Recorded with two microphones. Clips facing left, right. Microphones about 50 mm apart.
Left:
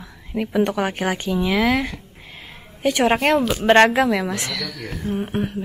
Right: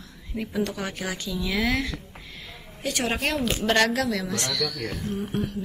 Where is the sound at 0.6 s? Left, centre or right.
Left.